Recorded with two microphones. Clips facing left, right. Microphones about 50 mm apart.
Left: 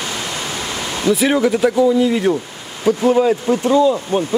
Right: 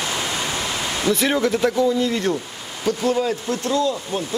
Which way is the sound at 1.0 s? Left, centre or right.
Centre.